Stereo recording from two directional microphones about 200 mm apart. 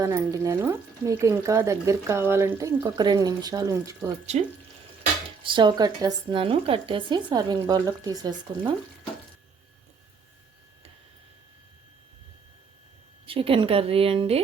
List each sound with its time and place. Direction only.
0.0 s speech: 15° right (ahead or behind)
5.4 s speech: 25° right (ahead or behind)
13.2 s speech: 25° right (ahead or behind)